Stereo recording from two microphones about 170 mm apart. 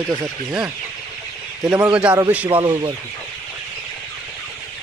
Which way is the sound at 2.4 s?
30° right (ahead or behind).